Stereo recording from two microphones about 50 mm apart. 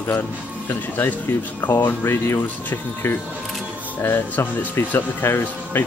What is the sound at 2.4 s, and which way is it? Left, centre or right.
Speech, left.